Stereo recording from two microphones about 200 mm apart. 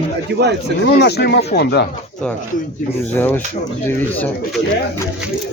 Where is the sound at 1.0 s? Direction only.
55° left (ahead or behind).